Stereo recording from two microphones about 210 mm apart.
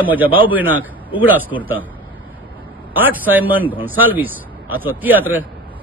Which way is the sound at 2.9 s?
10° right (ahead or behind).